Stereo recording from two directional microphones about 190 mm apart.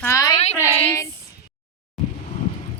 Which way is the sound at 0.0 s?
15° left (ahead or behind).